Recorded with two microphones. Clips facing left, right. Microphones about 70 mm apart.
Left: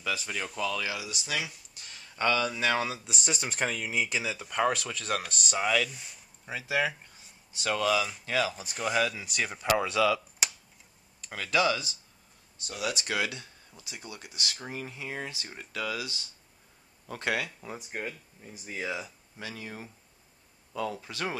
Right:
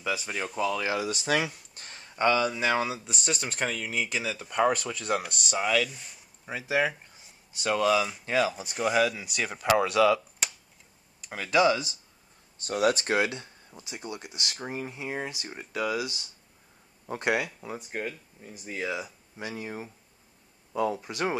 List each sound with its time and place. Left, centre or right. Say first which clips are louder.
0.0 s speech: right 2 dB; centre
0.8 s speech: right 7 dB; right
2.3 s speech: right 2 dB; centre
4.1 s speech: right 1 dB; centre
6.5 s speech: right 2 dB; right; by 9.8 s centre
9.8 s speech: right 5 dB; centre
12.5 s speech: right 9 dB; right
13.1 s speech: right 5 dB; right
17.6 s speech: right 3 dB; centre
19.0 s speech: right 4 dB; centre